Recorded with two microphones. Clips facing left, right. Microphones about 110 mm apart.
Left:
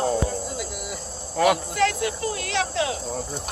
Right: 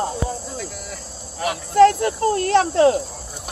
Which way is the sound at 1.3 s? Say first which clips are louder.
Left 6 dB; 90° left.